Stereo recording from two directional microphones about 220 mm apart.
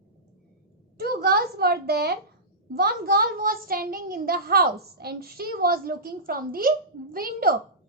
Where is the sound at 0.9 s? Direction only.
45° right (ahead or behind).